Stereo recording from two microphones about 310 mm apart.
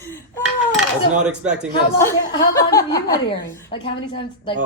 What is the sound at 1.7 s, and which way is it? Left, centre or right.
A woman's voice, centre.